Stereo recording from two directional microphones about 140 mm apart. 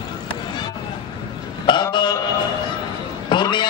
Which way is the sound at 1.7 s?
35° left (ahead or behind).